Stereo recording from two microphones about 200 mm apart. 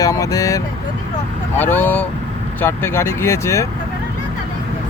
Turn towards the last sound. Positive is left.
turn(degrees=15)  # may be behind; listen again after turning